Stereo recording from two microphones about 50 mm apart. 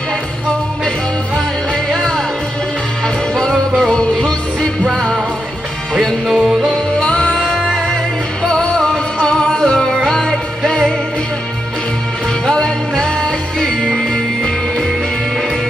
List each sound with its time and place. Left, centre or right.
3.9 s music: centre
6.2 s music: centre
7.0 s music: centre
12.4 s music: centre